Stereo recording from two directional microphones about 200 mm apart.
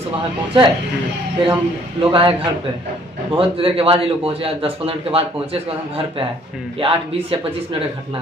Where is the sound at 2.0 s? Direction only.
25° right (ahead or behind).